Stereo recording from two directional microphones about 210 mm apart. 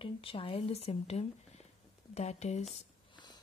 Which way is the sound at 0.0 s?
25° left (ahead or behind).